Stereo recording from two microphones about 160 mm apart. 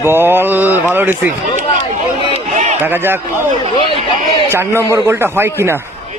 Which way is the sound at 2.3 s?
50° right (ahead or behind).